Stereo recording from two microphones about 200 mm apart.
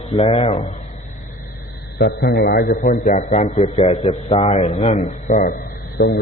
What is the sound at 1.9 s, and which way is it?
A man's voice, 50° left (ahead or behind).